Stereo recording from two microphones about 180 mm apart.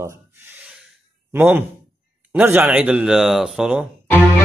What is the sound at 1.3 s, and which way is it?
A man's voice, 10° right (ahead or behind).